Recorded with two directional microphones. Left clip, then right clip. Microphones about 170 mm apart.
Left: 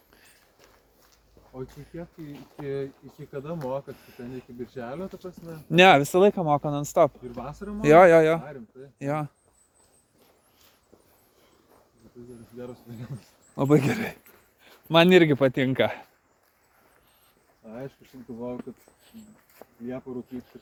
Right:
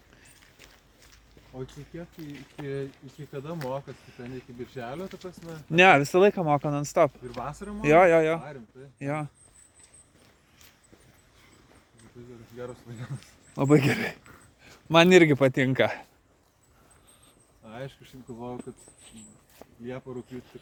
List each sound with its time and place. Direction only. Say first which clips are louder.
2.3 s speech: left 3 dB; centre (ahead or behind)
5.7 s speech: left 2 dB; 15° left (ahead or behind)
6.0 s speech: left 1 dB; 5° left (ahead or behind)
7.3 s speech: right 1 dB; 15° right (ahead or behind)
7.8 s speech: left 4 dB; 25° left (ahead or behind)
8.4 s speech: left 1 dB; 15° right (ahead or behind)
9.0 s speech: left 3 dB; 15° left (ahead or behind)
12.5 s speech: right 1 dB; 15° right (ahead or behind)
13.5 s speech: even; 5° right (ahead or behind)
19.6 s a sound: left 1 dB; 30° right (ahead or behind)